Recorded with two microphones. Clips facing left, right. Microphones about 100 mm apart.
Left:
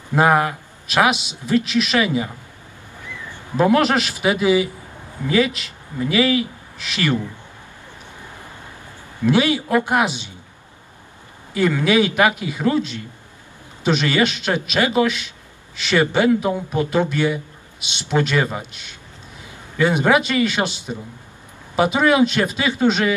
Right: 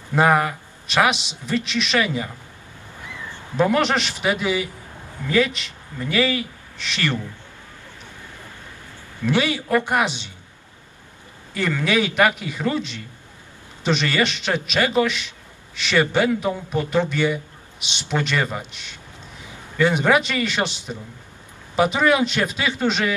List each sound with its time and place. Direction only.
0.1 s a man's voice: 5° left (ahead or behind)
3.5 s a man's voice: 5° left (ahead or behind)
9.2 s a man's voice: centre (ahead or behind)
11.5 s a man's voice: 5° left (ahead or behind)